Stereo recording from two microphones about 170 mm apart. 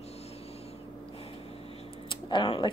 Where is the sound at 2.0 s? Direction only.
30° left (ahead or behind).